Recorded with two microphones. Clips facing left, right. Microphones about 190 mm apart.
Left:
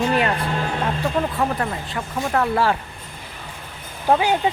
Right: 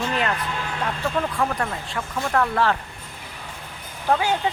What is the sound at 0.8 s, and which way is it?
Speech, 20° left (ahead or behind).